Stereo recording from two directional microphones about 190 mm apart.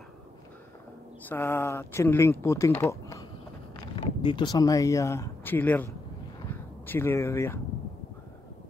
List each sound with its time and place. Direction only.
1.2 s speech: 10° left (ahead or behind)